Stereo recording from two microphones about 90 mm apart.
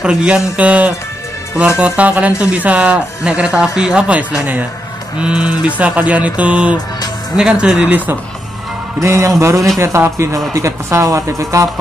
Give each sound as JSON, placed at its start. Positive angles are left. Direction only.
{"t": 0.0, "sound": "speech", "side_deg": -10}
{"t": 9.0, "sound": "speech", "side_deg": -35}